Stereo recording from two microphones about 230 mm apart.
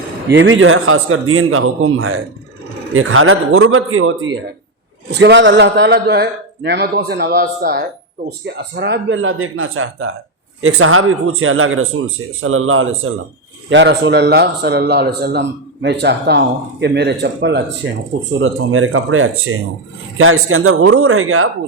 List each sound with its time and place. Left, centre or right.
0.3 s speech: right
5.1 s speech: right